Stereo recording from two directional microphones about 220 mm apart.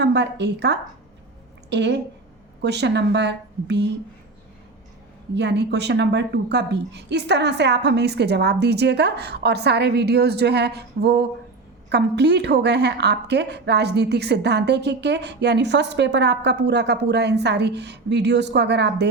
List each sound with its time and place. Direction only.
0.0 s a woman's voice: 50° right (ahead or behind)
5.3 s a woman's voice: 50° right (ahead or behind)